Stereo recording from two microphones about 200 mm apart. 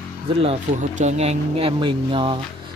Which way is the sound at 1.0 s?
35° right (ahead or behind).